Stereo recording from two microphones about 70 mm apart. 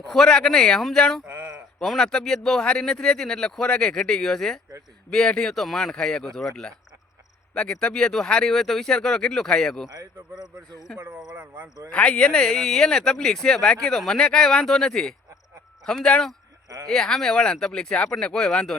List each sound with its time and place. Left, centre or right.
0.1 s speech: centre
1.3 s a sound: right
1.8 s speech: centre
9.9 s speech: right
11.3 s speech: right
11.9 s speech: centre
16.6 s a sound: right
16.9 s speech: centre